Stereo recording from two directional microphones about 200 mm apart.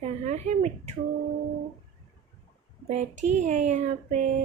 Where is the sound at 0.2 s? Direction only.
35° right (ahead or behind).